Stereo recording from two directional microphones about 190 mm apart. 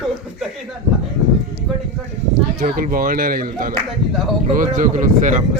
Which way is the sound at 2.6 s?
50° right (ahead or behind).